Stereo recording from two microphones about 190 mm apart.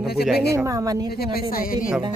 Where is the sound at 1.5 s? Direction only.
50° left (ahead or behind).